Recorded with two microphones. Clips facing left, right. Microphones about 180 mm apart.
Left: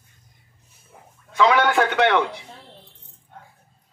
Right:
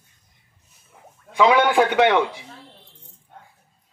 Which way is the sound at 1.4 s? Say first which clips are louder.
Right 2 dB; 15° right (ahead or behind).